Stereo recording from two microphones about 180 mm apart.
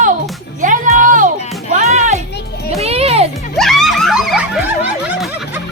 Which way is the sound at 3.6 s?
Centre (ahead or behind).